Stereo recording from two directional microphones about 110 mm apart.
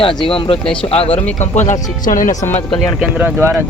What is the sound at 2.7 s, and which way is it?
Speech, 10° left (ahead or behind).